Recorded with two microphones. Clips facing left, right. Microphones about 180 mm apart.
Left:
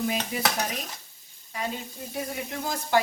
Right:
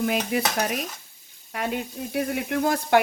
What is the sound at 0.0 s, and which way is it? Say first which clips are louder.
Frying: right 5 dB; 60° right (ahead or behind).